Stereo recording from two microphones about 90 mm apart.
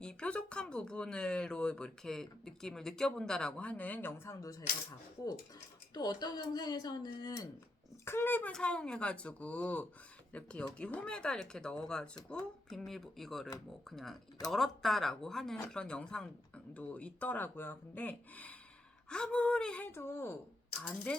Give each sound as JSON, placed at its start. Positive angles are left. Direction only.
{"t": 0.0, "sound": "speech", "side_deg": 10}
{"t": 4.3, "sound": "speech", "side_deg": 40}
{"t": 8.0, "sound": "a child's voice", "side_deg": 25}
{"t": 19.9, "sound": "a child's voice", "side_deg": 30}
{"t": 20.8, "sound": "speech", "side_deg": 10}